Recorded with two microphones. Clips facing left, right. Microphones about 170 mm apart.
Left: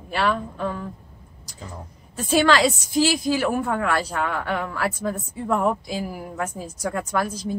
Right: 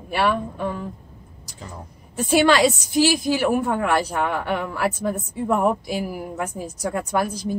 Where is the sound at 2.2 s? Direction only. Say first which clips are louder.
Right 2 dB; 15° right (ahead or behind).